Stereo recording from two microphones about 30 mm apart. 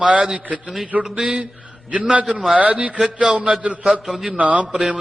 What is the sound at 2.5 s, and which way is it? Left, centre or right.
Speech, right.